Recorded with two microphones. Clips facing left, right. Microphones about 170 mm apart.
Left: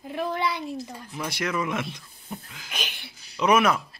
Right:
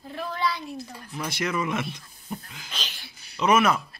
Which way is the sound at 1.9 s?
5° left (ahead or behind).